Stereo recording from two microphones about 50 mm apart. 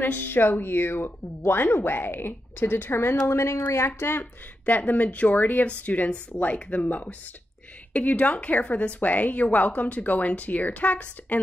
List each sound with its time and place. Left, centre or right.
0.0 s speech: left
3.3 s speech: left
4.6 s a woman's voice: left